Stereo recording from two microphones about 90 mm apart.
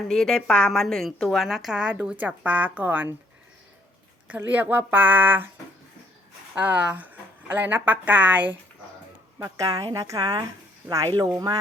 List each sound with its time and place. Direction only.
0.1 s a woman's voice: 5° left (ahead or behind); by 3.1 s 20° right (ahead or behind)
4.4 s speech: 20° right (ahead or behind)
6.5 s speech: 20° right (ahead or behind)
9.4 s speech: 40° right (ahead or behind)